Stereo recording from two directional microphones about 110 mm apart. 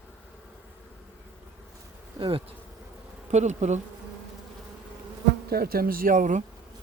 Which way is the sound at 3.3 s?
90° right.